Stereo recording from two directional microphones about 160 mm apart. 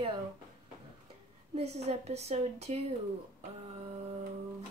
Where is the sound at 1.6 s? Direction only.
40° right (ahead or behind).